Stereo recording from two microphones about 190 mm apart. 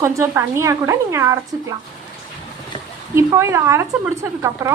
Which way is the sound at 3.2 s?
15° right (ahead or behind).